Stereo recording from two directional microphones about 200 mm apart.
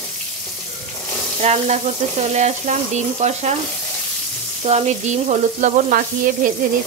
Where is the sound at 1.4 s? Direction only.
35° right (ahead or behind).